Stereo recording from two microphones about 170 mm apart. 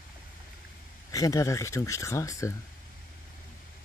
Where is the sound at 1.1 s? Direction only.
20° left (ahead or behind).